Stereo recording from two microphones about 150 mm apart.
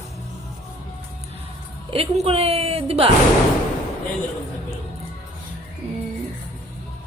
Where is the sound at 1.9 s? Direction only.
40° right (ahead or behind).